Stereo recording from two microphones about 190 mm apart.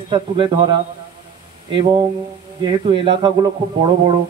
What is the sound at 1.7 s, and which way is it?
A man's voice, 25° right (ahead or behind).